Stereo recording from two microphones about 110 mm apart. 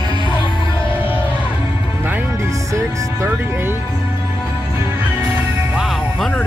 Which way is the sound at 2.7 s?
25° right (ahead or behind).